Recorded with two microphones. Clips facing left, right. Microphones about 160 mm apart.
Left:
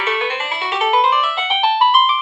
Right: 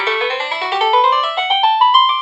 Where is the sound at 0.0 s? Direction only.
30° right (ahead or behind).